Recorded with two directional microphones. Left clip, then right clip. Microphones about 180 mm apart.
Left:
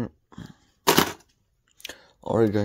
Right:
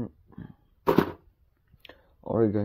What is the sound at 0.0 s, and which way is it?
Dog, 30° left (ahead or behind).